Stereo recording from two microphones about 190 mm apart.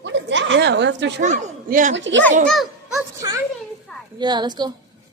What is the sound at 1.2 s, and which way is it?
Speech, 40° right (ahead or behind).